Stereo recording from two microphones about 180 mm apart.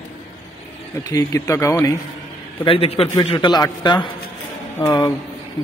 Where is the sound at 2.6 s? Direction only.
30° left (ahead or behind).